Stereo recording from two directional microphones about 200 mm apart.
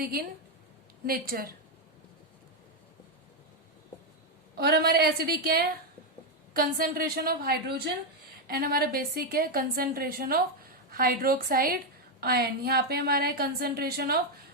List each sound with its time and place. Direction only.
0.0 s a woman's voice: 50° right (ahead or behind)
4.5 s a woman's voice: 55° right (ahead or behind)